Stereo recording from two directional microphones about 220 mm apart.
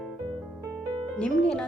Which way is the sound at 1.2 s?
5° left (ahead or behind).